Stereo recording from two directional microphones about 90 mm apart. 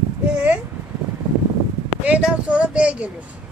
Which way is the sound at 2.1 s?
15° right (ahead or behind).